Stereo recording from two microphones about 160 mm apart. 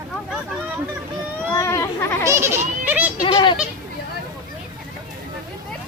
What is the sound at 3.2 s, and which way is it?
Goat, 30° left (ahead or behind).